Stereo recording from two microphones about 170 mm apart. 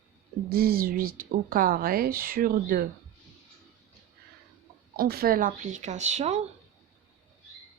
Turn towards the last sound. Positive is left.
turn(degrees=-40)  # may be behind; listen again after turning